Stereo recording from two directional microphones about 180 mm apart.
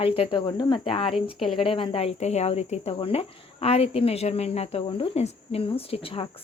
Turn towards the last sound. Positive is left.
turn(degrees=30)  # may be behind; listen again after turning